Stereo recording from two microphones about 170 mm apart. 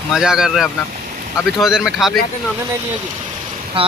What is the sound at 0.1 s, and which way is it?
Speech, 5° right (ahead or behind).